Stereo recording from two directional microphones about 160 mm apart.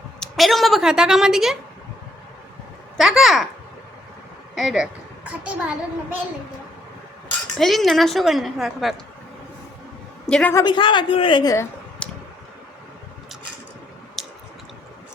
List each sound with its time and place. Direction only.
0.2 s a woman's voice: centre (ahead or behind)
3.0 s a woman's voice: centre (ahead or behind)
4.5 s a child's voice: centre (ahead or behind)
7.6 s a woman's voice: centre (ahead or behind)
10.2 s a woman's voice: 5° left (ahead or behind)
10.5 s a man's voice: 25° left (ahead or behind)
12.0 s tick: 5° left (ahead or behind)
14.2 s chewing: centre (ahead or behind)